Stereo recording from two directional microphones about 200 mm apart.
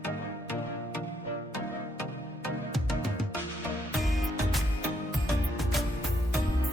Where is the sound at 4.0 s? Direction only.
Centre (ahead or behind).